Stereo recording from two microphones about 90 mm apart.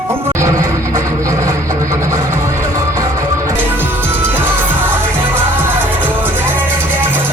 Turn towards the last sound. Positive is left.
turn(degrees=-25)  # may be behind; listen again after turning